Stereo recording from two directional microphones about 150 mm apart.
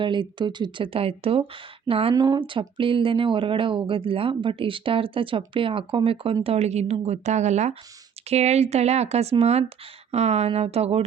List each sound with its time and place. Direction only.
0.0 s speech: 30° right (ahead or behind)